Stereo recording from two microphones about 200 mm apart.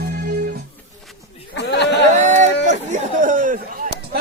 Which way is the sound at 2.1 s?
35° right (ahead or behind).